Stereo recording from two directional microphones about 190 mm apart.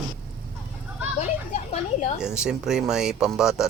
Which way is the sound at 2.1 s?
5° right (ahead or behind).